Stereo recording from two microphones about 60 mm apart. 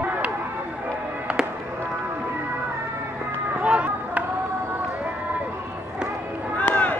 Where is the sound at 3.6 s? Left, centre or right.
Right.